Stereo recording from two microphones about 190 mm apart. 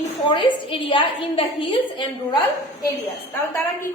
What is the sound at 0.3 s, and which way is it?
A woman's voice, 25° left (ahead or behind).